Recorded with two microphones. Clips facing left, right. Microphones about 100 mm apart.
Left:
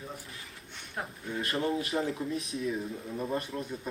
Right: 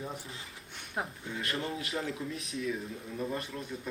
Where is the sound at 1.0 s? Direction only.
15° right (ahead or behind).